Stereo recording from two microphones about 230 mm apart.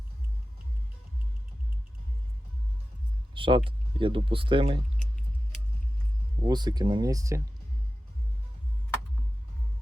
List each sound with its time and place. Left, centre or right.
3.3 s speech: right
6.4 s speech: centre